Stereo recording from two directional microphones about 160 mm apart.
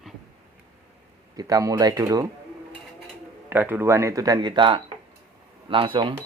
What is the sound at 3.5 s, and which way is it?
Speech, 10° right (ahead or behind).